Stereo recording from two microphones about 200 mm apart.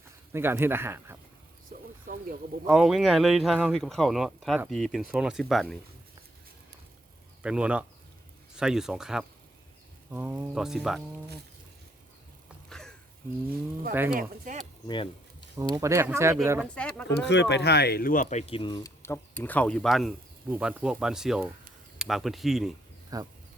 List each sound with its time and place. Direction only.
0.3 s speech: 10° right (ahead or behind)
2.6 s speech: 5° right (ahead or behind)
7.4 s speech: 5° right (ahead or behind)
12.6 s a sound: 5° left (ahead or behind)
13.9 s speech: 10° right (ahead or behind)
14.2 s speech: 40° right (ahead or behind)
14.8 s a sound: 25° left (ahead or behind)
15.7 s speech: 15° right (ahead or behind)
16.7 s speech: 5° left (ahead or behind)
17.1 s speech: 60° left (ahead or behind); by 22.7 s centre (ahead or behind)
23.1 s speech: 20° right (ahead or behind)